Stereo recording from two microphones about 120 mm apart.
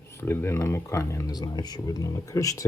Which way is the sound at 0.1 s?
20° left (ahead or behind).